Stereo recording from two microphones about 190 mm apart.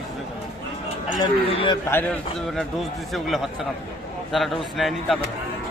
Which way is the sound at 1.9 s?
10° left (ahead or behind).